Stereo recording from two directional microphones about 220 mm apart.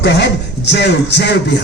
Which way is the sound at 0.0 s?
50° left (ahead or behind).